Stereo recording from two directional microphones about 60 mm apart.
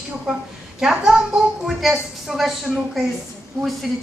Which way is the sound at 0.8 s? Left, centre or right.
Centre.